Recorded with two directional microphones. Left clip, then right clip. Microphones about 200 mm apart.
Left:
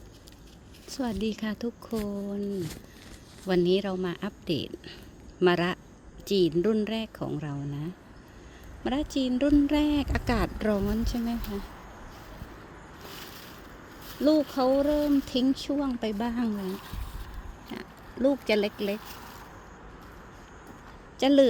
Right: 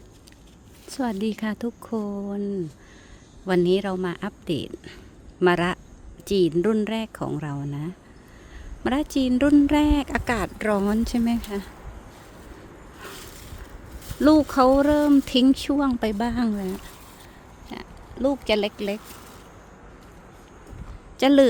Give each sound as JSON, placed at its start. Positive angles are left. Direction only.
{"t": 0.9, "sound": "speech", "side_deg": -15}
{"t": 3.4, "sound": "speech", "side_deg": -10}
{"t": 14.2, "sound": "speech", "side_deg": -35}
{"t": 17.7, "sound": "speech", "side_deg": 0}
{"t": 21.2, "sound": "speech", "side_deg": -20}